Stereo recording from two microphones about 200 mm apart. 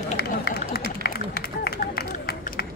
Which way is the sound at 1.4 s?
50° left (ahead or behind).